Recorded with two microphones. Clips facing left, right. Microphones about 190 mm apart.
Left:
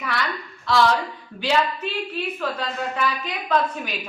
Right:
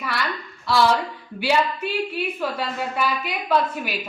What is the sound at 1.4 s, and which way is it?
A woman's voice, 10° right (ahead or behind).